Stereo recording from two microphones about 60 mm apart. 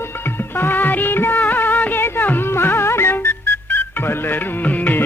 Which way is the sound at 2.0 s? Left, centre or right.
Left.